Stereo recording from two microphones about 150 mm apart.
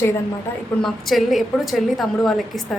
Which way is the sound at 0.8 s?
Centre (ahead or behind).